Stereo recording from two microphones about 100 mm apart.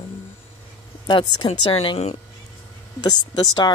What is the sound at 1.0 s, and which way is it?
Speech, 50° left (ahead or behind).